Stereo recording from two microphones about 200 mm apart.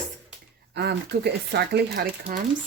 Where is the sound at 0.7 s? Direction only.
55° right (ahead or behind).